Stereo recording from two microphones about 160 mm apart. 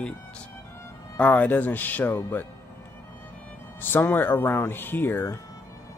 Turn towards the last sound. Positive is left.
turn(degrees=15)  # may be behind; listen again after turning